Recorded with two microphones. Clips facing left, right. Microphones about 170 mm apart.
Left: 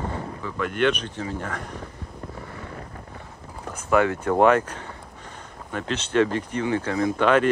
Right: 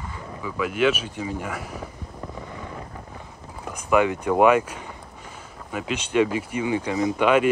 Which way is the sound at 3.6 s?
15° right (ahead or behind).